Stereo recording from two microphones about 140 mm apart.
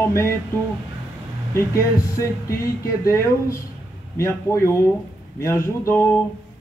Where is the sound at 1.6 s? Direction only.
20° left (ahead or behind).